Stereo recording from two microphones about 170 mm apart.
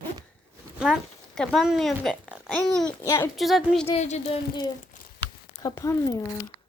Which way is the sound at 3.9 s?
40° left (ahead or behind).